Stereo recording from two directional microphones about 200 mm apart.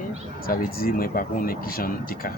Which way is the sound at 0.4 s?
45° left (ahead or behind).